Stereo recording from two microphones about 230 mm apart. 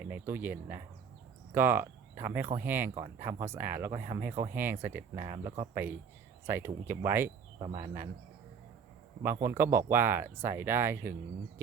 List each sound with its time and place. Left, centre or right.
0.0 s speech: centre
9.2 s speech: centre